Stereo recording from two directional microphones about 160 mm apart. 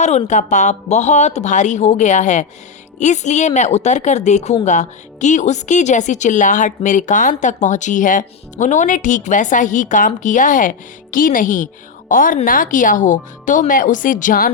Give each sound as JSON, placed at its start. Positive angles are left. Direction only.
{"t": 0.0, "sound": "a woman's voice", "side_deg": 45}